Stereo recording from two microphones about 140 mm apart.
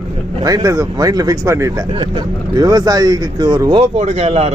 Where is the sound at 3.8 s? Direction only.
55° right (ahead or behind).